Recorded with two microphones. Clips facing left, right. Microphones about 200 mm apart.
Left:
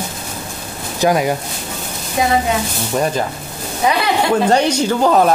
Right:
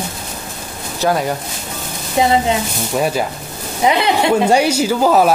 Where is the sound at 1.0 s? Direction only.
10° left (ahead or behind).